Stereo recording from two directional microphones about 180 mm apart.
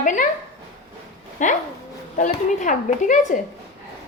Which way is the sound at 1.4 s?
45° left (ahead or behind).